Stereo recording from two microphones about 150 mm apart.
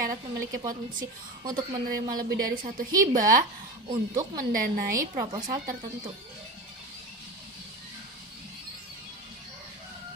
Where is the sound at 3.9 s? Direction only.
25° right (ahead or behind).